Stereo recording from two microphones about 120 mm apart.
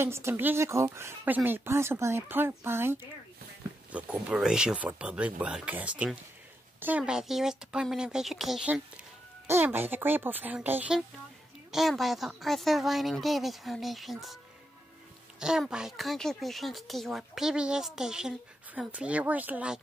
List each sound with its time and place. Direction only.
0.0 s speech: 20° right (ahead or behind); by 8.8 s 5° right (ahead or behind)
9.5 s speech: 15° right (ahead or behind)
11.7 s speech: centre (ahead or behind)